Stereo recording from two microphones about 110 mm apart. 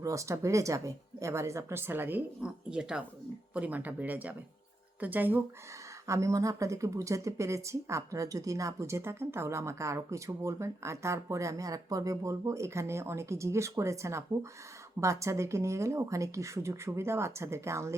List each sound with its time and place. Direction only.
0.0 s speech: 30° right (ahead or behind)
6.1 s speech: 30° right (ahead or behind)